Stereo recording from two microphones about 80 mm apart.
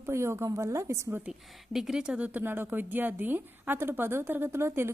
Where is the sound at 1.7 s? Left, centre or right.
Centre.